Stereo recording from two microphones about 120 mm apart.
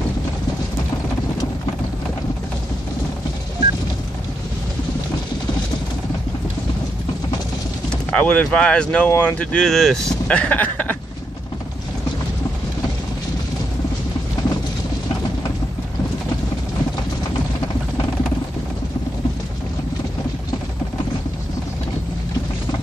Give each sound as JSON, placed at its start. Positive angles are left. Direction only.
{"t": 8.1, "sound": "speech", "side_deg": 10}